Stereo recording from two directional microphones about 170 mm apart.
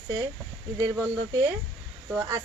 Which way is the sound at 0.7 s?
20° right (ahead or behind).